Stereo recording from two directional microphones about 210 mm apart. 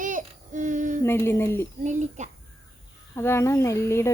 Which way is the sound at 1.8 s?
35° right (ahead or behind).